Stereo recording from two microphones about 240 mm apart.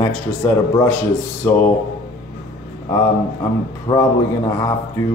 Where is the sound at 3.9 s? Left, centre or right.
Left.